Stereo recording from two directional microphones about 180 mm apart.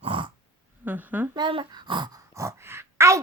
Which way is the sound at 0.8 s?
10° right (ahead or behind).